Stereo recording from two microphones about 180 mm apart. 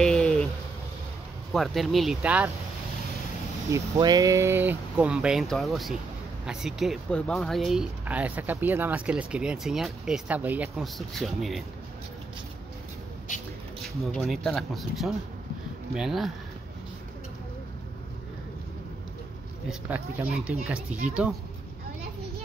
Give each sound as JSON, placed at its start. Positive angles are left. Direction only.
{"t": 0.0, "sound": "a sound", "side_deg": 5}
{"t": 1.5, "sound": "speech", "side_deg": 0}
{"t": 3.9, "sound": "speech", "side_deg": -25}
{"t": 13.8, "sound": "speech", "side_deg": 0}
{"t": 19.7, "sound": "speech", "side_deg": -5}